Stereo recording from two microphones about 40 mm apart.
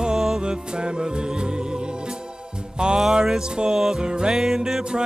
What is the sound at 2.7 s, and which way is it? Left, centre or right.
Music, right.